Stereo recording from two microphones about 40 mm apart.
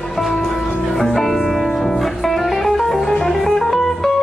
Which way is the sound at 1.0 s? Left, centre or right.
Centre.